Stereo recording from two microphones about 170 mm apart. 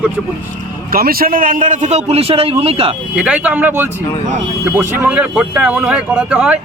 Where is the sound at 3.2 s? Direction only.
5° right (ahead or behind).